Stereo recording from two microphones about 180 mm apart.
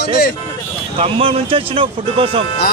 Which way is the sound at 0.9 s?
30° right (ahead or behind).